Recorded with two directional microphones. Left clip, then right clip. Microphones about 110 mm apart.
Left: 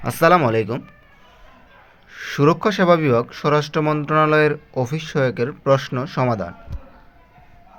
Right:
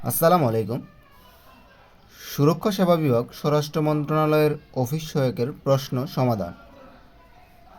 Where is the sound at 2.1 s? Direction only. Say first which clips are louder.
Left 5 dB; 30° right (ahead or behind).